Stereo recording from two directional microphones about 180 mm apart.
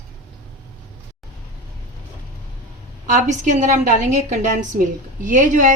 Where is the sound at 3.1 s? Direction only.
45° right (ahead or behind).